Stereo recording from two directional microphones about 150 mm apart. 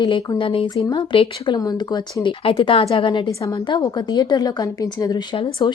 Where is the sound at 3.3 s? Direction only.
25° left (ahead or behind).